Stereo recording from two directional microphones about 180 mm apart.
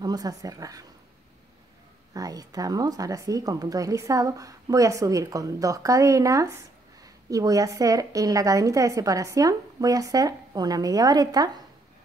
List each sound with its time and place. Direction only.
0.0 s a woman's voice: 20° right (ahead or behind)
2.1 s a woman's voice: 20° right (ahead or behind)